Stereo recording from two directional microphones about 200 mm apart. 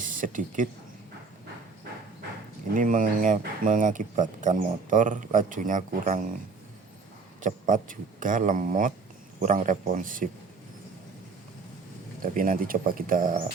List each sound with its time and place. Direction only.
0.0 s speech: 40° right (ahead or behind)
2.7 s speech: 40° right (ahead or behind)
7.4 s speech: 40° right (ahead or behind)
12.2 s speech: 45° right (ahead or behind)